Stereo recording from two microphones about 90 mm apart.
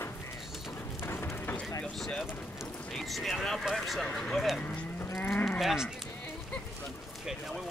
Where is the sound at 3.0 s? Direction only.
Centre (ahead or behind).